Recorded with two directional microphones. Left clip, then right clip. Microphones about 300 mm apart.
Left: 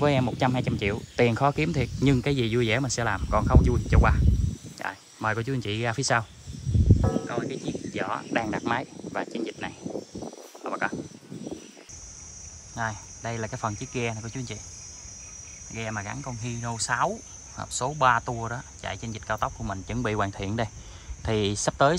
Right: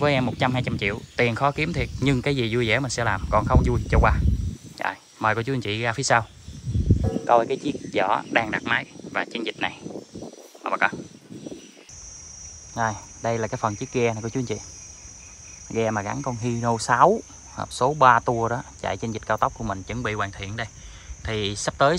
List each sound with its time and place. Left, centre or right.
0.0 s speech: centre
10.6 s a sound: centre
12.7 s speech: centre
15.7 s speech: centre